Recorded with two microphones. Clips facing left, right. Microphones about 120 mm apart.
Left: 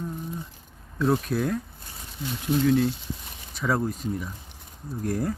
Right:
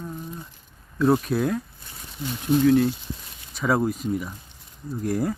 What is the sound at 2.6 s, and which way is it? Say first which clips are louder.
Speech: right 3 dB; centre (ahead or behind).